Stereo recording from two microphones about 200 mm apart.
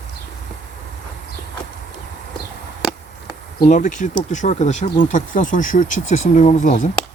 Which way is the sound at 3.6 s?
40° left (ahead or behind).